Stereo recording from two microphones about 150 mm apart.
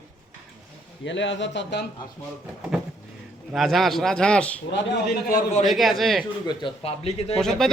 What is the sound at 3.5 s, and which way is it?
A man's voice, centre (ahead or behind).